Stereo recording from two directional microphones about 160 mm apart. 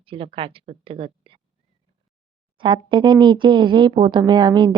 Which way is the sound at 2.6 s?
30° right (ahead or behind).